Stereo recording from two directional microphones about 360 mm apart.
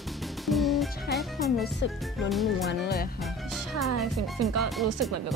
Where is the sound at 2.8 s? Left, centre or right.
Left.